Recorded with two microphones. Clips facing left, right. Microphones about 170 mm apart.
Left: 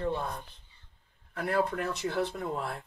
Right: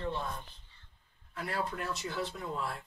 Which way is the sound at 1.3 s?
55° left (ahead or behind).